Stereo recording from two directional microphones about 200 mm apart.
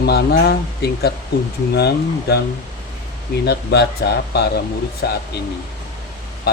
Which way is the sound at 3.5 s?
55° left (ahead or behind).